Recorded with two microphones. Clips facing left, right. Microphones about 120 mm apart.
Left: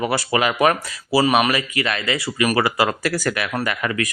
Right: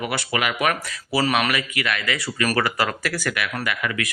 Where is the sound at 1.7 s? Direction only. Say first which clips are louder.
Left 3 dB; 35° left (ahead or behind).